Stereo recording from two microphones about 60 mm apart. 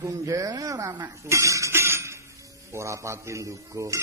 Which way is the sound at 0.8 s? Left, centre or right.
Right.